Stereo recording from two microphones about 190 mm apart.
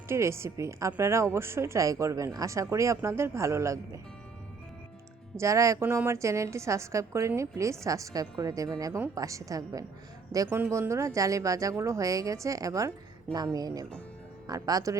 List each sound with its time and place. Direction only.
0.1 s a woman's voice: 15° right (ahead or behind)
5.4 s a woman's voice: 15° right (ahead or behind)